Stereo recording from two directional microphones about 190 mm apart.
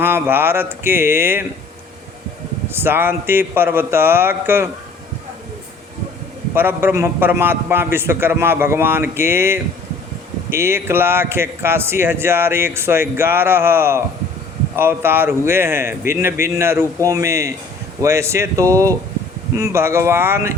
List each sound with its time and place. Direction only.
0.0 s speech: 10° right (ahead or behind)
2.6 s speech: 10° right (ahead or behind)
6.5 s speech: 10° right (ahead or behind)